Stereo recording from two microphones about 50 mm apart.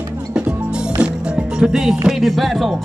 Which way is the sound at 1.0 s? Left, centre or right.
Centre.